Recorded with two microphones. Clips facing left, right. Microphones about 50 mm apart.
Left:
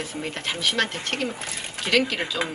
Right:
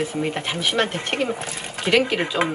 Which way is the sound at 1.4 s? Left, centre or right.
Centre.